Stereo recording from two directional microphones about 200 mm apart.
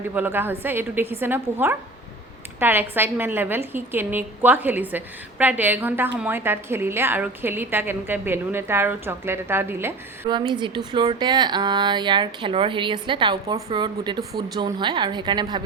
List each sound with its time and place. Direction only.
0.1 s a woman's voice: 10° right (ahead or behind)
10.3 s speech: 20° right (ahead or behind)